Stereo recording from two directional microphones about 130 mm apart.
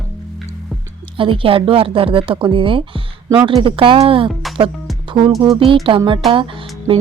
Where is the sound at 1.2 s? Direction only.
40° right (ahead or behind).